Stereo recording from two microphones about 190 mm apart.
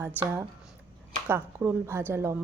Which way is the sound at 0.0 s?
10° right (ahead or behind).